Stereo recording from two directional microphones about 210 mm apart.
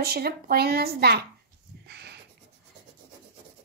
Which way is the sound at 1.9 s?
50° right (ahead or behind).